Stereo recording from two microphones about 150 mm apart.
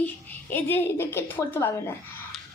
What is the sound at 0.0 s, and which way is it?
A woman's voice, 10° left (ahead or behind).